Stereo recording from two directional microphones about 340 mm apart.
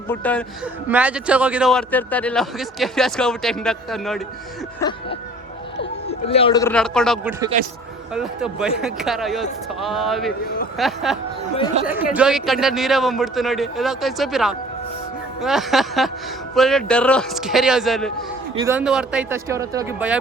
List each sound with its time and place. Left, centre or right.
0.1 s a man's voice: centre
4.8 s a man's voice: centre
7.5 s a man's voice: right
8.1 s a man's voice: centre